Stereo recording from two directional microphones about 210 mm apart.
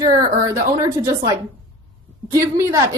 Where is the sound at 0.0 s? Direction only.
15° right (ahead or behind).